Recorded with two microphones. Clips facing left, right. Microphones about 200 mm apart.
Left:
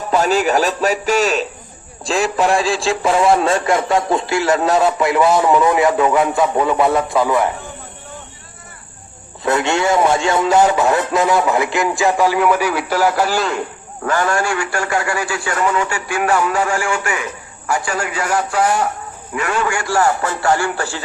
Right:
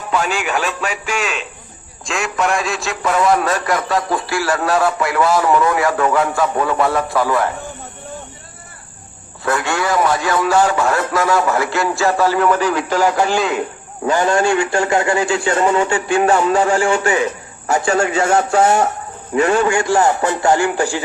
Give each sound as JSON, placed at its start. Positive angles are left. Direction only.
{"t": 0.1, "sound": "a man's voice", "side_deg": 40}
{"t": 9.4, "sound": "speech", "side_deg": 20}
{"t": 14.0, "sound": "a man's voice", "side_deg": -20}